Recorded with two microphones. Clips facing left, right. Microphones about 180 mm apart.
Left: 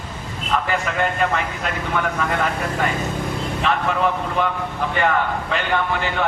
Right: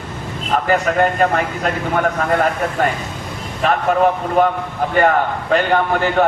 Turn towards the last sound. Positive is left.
turn(degrees=-45)  # may be behind; listen again after turning